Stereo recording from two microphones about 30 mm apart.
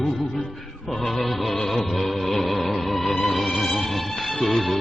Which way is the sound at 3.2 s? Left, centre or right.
Centre.